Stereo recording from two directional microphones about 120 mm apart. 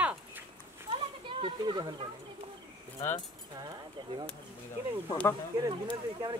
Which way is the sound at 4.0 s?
40° right (ahead or behind).